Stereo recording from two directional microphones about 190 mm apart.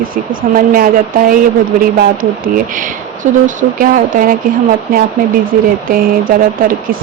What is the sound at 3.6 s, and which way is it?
Speech, 45° right (ahead or behind).